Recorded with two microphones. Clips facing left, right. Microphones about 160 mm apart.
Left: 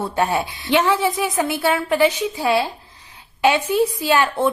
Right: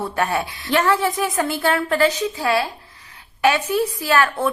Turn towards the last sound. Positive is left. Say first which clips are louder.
# left 1 dB
turn(degrees=25)  # may be behind; listen again after turning